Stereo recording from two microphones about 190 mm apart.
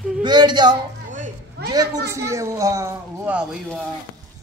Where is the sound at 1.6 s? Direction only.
60° right (ahead or behind).